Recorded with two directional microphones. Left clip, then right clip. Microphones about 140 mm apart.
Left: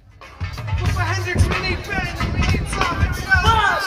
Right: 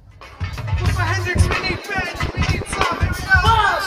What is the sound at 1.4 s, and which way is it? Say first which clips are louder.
Music: right 1 dB; 5° left (ahead or behind).